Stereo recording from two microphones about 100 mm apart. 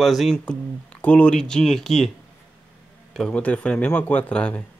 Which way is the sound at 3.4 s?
15° left (ahead or behind).